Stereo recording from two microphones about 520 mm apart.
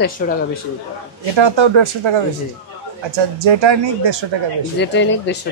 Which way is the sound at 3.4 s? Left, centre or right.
Right.